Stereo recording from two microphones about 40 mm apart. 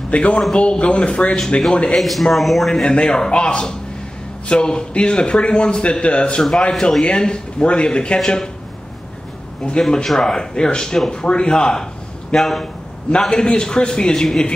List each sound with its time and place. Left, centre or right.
0.1 s a man's voice: left
2.0 s speech: centre
2.7 s a man's voice: left
6.4 s speech: centre
7.1 s a man's voice: left
9.7 s a man's voice: left